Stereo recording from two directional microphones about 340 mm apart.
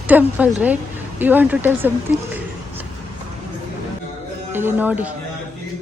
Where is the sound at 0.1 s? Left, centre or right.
Centre.